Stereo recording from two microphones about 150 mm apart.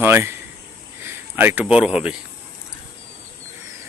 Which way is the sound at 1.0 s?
15° right (ahead or behind).